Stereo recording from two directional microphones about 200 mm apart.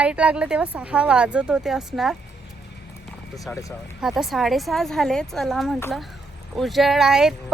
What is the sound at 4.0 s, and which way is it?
Speech, centre (ahead or behind).